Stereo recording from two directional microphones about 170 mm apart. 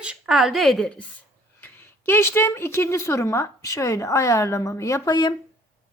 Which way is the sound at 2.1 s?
15° left (ahead or behind).